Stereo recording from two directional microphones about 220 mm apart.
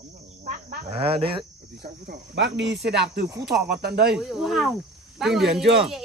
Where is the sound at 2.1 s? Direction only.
50° right (ahead or behind).